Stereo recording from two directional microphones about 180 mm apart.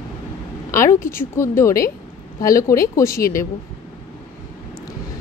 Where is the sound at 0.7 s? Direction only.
15° left (ahead or behind).